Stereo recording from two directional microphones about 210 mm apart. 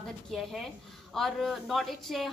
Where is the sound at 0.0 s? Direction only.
Centre (ahead or behind).